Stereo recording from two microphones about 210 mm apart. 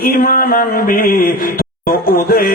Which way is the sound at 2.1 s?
45° left (ahead or behind).